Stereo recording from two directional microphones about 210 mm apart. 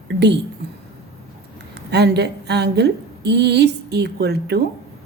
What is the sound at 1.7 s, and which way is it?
A woman's voice, 50° right (ahead or behind).